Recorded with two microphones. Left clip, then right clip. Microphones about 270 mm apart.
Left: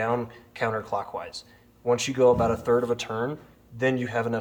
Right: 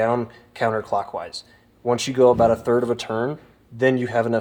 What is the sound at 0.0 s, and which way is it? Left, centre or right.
Speech, right.